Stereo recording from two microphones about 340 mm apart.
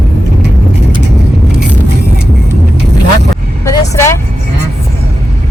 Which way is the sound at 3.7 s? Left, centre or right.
Centre.